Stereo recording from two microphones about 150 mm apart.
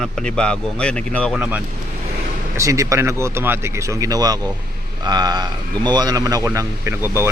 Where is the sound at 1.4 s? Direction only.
10° right (ahead or behind).